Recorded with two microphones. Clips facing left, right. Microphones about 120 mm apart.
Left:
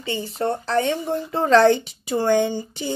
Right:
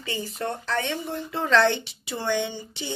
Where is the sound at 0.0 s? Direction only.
30° left (ahead or behind).